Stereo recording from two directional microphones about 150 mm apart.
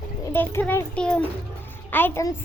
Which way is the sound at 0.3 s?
15° left (ahead or behind).